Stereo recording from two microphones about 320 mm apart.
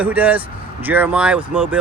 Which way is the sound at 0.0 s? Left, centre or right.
Centre.